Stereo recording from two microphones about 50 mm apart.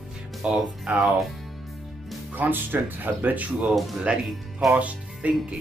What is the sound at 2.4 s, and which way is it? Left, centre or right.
Speech, right.